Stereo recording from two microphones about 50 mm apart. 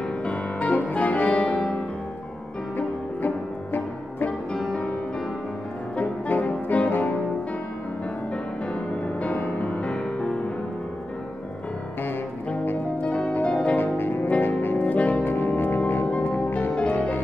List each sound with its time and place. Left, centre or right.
0.2 s music: left
1.4 s music: centre
3.2 s music: left
5.9 s music: left
9.0 s music: left
12.6 s music: left
13.1 s harp: left
13.9 s music: left
14.4 s saxophone: left
15.0 s brass instrument: left
16.4 s music: left